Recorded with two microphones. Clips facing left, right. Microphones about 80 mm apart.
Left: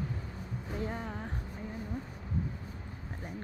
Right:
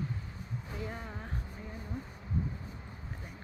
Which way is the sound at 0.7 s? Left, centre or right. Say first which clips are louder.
Left 5 dB; left.